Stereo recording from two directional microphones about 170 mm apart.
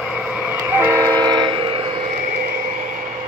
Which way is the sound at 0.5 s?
10° right (ahead or behind).